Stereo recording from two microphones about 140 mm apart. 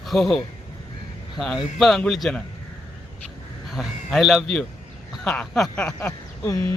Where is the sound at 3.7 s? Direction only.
Centre (ahead or behind).